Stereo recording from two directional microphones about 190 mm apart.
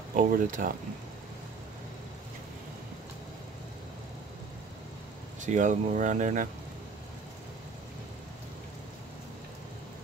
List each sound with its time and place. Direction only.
0.1 s speech: 45° right (ahead or behind)
5.4 s speech: 40° right (ahead or behind)